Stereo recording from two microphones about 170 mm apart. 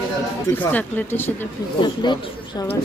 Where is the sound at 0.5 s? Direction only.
10° left (ahead or behind).